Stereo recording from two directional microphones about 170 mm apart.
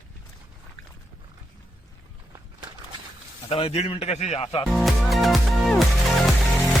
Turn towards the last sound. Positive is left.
turn(degrees=0)  # may be behind; listen again after turning